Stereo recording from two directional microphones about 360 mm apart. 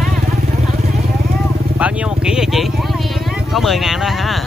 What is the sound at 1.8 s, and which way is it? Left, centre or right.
Vehicle, centre.